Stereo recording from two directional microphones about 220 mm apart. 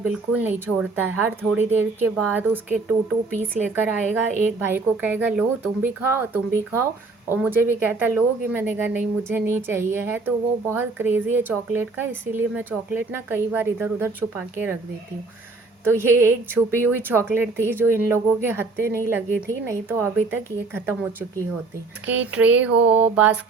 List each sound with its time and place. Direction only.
0.0 s a woman's voice: 5° right (ahead or behind)
15.8 s a woman's voice: 10° right (ahead or behind)
22.9 s a sound: 30° right (ahead or behind)
23.1 s mantra: 5° right (ahead or behind)